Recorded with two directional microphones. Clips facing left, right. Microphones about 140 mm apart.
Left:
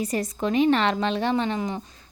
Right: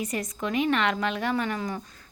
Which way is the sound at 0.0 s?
35° left (ahead or behind).